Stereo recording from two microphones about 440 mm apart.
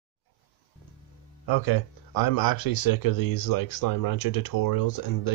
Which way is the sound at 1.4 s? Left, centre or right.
Left.